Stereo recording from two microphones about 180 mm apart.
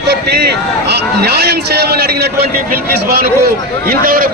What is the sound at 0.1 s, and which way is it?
A man's voice, 65° right (ahead or behind).